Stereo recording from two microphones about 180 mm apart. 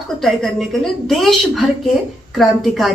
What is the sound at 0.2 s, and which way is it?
A woman's voice, centre (ahead or behind).